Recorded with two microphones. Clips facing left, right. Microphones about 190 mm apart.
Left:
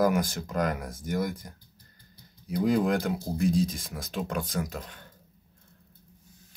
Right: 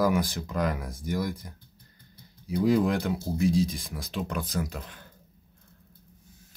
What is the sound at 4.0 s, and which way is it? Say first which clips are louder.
Speech: even; 50° left (ahead or behind).